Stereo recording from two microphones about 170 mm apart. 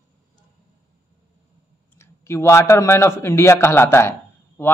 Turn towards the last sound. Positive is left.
turn(degrees=15)  # may be behind; listen again after turning